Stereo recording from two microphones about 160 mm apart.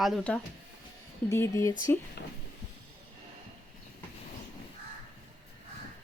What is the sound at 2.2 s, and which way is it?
Speech, 90° left.